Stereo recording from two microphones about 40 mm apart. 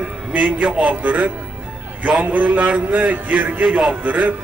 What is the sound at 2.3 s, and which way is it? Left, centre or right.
Music, right.